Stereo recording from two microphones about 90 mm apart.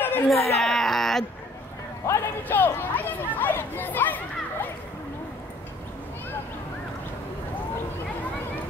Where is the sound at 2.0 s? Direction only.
35° left (ahead or behind).